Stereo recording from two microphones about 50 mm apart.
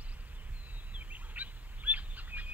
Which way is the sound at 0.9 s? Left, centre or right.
Right.